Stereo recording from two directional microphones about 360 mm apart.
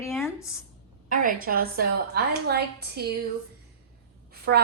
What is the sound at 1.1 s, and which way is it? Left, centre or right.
A woman's voice, right.